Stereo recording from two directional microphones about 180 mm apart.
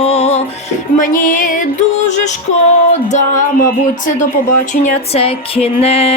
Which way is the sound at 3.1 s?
45° left (ahead or behind).